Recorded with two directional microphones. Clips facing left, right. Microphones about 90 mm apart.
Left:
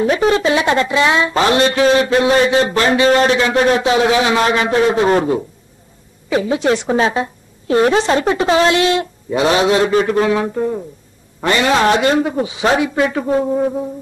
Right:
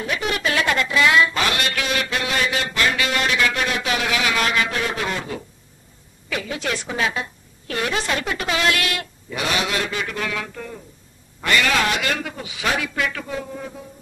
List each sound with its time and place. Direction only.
0.0 s speech: 35° left (ahead or behind)